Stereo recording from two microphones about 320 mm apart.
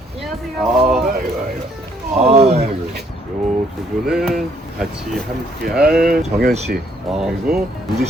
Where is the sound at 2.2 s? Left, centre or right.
Centre.